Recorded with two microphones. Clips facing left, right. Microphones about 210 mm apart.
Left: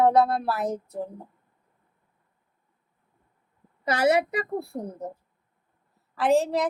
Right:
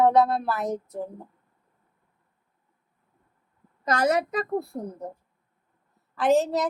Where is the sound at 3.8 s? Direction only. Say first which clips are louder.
Left 1 dB; 10° left (ahead or behind).